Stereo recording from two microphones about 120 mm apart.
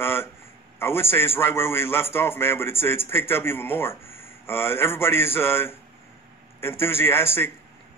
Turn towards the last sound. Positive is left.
turn(degrees=20)  # may be behind; listen again after turning